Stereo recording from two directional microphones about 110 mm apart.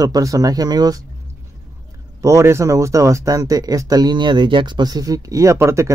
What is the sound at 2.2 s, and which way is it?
Speech, 25° right (ahead or behind).